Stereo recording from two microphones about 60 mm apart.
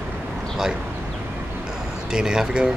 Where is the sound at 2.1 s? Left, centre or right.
Centre.